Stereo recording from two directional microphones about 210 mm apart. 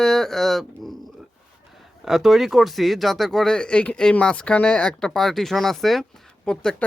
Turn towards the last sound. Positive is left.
turn(degrees=5)  # may be behind; listen again after turning